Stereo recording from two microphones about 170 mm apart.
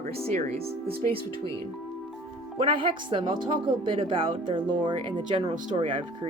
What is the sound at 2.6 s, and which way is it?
Speech, 30° right (ahead or behind).